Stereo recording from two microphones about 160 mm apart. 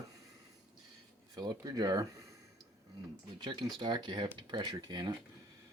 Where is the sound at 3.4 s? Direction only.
30° right (ahead or behind).